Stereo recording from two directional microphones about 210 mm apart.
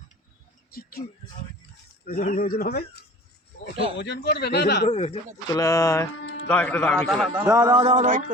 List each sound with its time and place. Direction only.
0.7 s speech: 45° left (ahead or behind)
2.0 s speech: 40° left (ahead or behind)
4.9 s speech: 35° left (ahead or behind)
5.5 s speech: 15° left (ahead or behind)
6.2 s music: 70° left (ahead or behind)
6.5 s a man's voice: 5° left (ahead or behind)
7.3 s music: 15° right (ahead or behind); by 8.2 s 35° right (ahead or behind)